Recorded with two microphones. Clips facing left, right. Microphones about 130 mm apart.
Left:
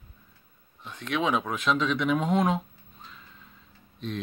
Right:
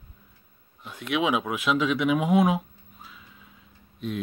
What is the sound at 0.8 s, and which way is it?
Speech, 10° right (ahead or behind).